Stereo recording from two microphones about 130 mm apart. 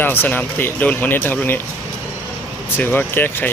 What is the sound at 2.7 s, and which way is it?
Speech, 15° left (ahead or behind).